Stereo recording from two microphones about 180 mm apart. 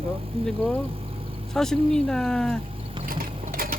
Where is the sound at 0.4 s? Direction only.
5° left (ahead or behind).